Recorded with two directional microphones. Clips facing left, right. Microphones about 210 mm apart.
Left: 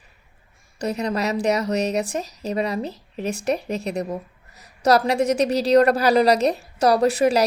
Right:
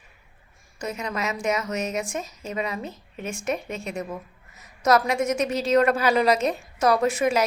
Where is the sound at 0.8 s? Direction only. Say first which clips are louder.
Left 6 dB; 35° left (ahead or behind).